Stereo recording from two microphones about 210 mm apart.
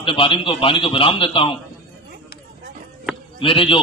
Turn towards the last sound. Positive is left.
turn(degrees=25)  # may be behind; listen again after turning